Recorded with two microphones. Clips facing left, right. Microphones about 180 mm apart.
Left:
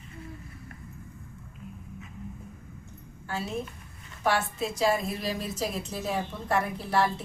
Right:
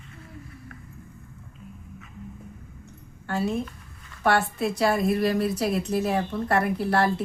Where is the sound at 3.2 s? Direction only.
60° right (ahead or behind).